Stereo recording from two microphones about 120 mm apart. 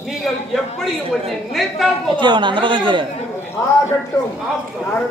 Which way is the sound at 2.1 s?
40° right (ahead or behind).